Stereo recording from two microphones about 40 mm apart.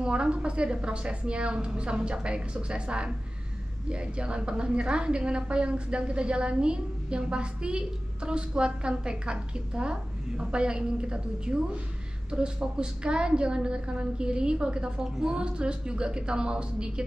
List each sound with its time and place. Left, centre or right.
0.0 s a woman's voice: right